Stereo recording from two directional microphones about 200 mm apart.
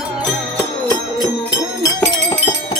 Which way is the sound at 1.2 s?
20° left (ahead or behind).